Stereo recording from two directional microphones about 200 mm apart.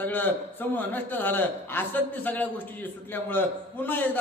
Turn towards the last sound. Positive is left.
turn(degrees=10)  # may be behind; listen again after turning